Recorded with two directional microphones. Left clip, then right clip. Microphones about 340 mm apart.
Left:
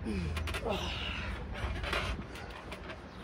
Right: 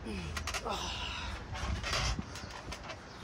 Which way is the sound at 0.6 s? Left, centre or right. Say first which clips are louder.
Left 1 dB; centre.